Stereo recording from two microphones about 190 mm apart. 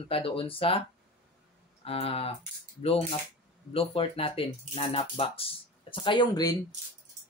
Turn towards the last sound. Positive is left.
turn(degrees=20)  # may be behind; listen again after turning